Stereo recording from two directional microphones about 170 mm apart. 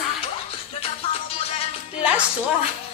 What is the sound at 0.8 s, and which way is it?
Music, 35° left (ahead or behind).